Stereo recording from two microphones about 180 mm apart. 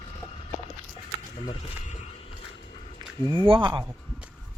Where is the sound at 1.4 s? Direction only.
40° left (ahead or behind).